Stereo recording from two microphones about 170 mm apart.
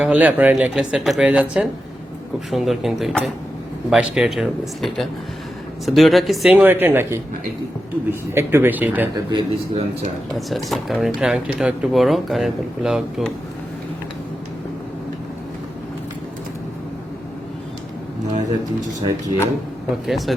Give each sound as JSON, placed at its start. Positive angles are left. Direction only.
{"t": 0.0, "sound": "speech", "side_deg": -10}
{"t": 8.3, "sound": "speech", "side_deg": -15}
{"t": 9.3, "sound": "speech", "side_deg": -35}
{"t": 10.3, "sound": "speech", "side_deg": 0}
{"t": 18.9, "sound": "speech", "side_deg": -20}
{"t": 20.1, "sound": "speech", "side_deg": 0}